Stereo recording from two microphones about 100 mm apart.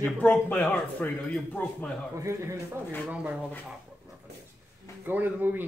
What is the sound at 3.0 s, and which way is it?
Speech, 15° right (ahead or behind).